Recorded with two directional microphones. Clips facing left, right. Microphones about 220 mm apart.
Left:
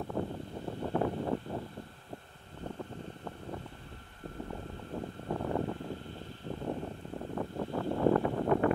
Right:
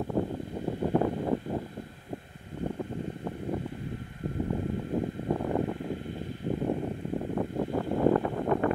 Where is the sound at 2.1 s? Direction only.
15° right (ahead or behind).